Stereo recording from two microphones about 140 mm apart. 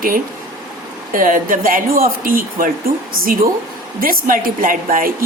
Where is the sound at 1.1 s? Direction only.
75° right (ahead or behind).